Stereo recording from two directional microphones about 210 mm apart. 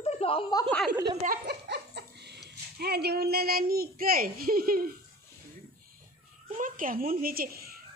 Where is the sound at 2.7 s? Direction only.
50° right (ahead or behind).